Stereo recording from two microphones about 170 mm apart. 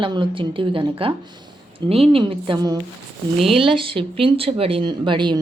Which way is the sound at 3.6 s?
30° right (ahead or behind).